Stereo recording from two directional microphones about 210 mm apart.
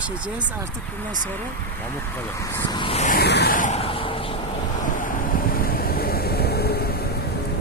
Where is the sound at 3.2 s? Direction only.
50° left (ahead or behind); by 4.1 s 25° left (ahead or behind).